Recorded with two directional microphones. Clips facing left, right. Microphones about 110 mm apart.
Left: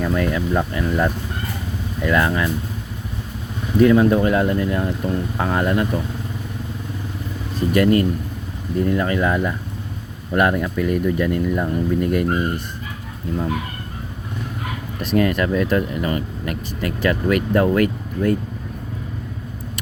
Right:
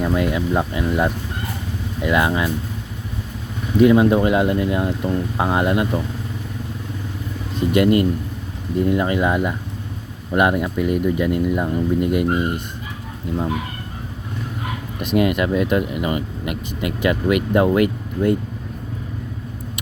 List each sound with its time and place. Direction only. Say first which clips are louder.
0.0 s speech: right 1 dB; 15° right (ahead or behind)
3.8 s speech: right 1 dB; 15° right (ahead or behind)
7.5 s speech: even; 20° right (ahead or behind)
14.9 s speech: even; 15° right (ahead or behind)